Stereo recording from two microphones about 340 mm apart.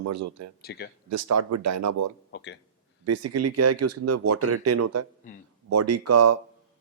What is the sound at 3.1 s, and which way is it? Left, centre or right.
Speech, right.